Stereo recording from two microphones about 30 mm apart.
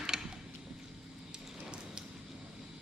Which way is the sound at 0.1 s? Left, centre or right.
Centre.